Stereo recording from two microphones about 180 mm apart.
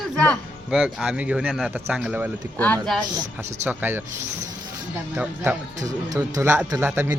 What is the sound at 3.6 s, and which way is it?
Speech, 10° right (ahead or behind).